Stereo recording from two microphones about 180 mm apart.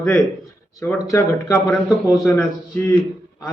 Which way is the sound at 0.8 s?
15° left (ahead or behind).